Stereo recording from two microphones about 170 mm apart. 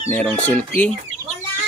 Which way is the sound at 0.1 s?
10° left (ahead or behind).